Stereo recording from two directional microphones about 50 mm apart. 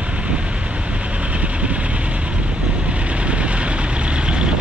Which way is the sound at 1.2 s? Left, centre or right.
Right.